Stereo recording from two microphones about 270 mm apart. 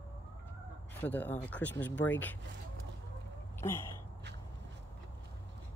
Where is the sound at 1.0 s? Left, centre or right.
Centre.